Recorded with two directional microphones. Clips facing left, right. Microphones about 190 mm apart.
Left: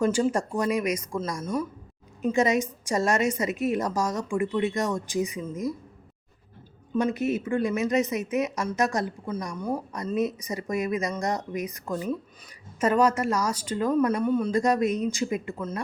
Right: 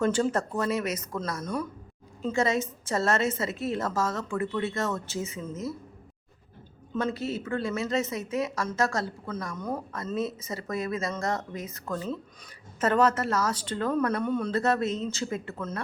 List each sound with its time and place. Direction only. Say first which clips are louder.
0.0 s speech: left 2 dB; 10° left (ahead or behind)
6.9 s speech: left 5 dB; 15° left (ahead or behind)